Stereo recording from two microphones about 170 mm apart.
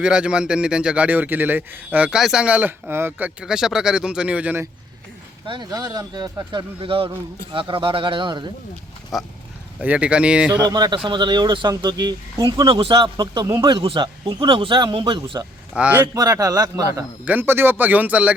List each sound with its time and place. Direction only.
0.0 s a man's voice: 5° right (ahead or behind)
5.5 s speech: 25° right (ahead or behind)
9.1 s a man's voice: centre (ahead or behind)
10.6 s speech: 25° right (ahead or behind)
15.7 s a man's voice: 10° right (ahead or behind)
16.1 s a man's voice: 20° right (ahead or behind)